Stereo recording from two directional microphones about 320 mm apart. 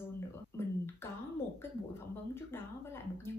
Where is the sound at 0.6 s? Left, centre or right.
Centre.